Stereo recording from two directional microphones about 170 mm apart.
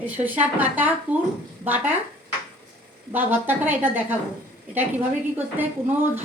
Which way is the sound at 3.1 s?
10° right (ahead or behind).